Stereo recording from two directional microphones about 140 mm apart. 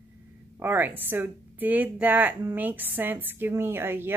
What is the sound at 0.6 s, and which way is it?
A woman's voice, 15° right (ahead or behind).